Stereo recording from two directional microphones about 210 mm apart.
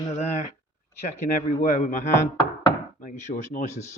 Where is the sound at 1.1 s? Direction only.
35° left (ahead or behind).